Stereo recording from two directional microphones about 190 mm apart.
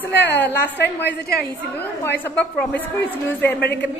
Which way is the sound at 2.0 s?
10° left (ahead or behind).